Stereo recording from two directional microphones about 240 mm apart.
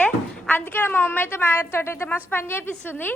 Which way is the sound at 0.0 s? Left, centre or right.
Centre.